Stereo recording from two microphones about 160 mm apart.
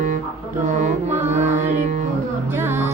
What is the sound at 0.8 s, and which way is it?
Mantra, 50° right (ahead or behind).